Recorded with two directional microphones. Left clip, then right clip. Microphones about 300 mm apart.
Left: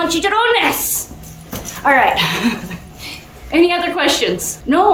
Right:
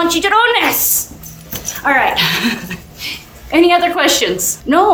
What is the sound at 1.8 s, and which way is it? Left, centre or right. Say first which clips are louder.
A woman's voice: even; centre.